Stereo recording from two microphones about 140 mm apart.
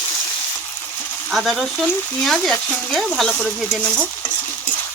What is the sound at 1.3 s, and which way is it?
Speech, centre (ahead or behind).